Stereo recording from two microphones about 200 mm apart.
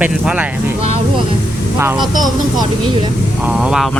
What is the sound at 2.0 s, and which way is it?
Speech, 20° right (ahead or behind).